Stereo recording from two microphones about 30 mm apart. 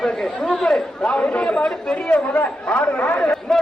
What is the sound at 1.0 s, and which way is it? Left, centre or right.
Speech, left.